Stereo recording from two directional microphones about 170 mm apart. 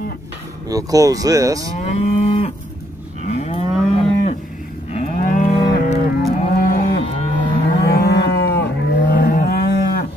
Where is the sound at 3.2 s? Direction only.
40° left (ahead or behind).